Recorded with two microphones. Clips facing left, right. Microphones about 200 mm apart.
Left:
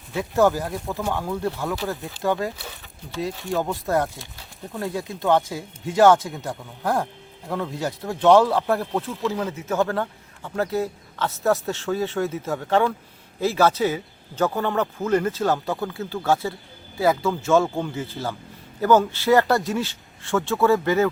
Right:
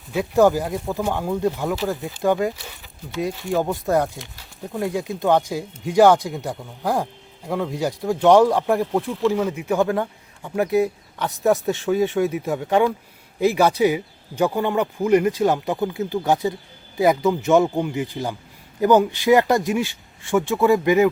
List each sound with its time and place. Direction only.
0.1 s speech: 15° right (ahead or behind)